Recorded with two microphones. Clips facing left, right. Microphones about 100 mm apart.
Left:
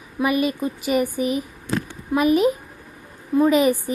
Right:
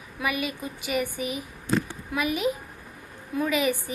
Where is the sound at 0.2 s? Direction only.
40° left (ahead or behind).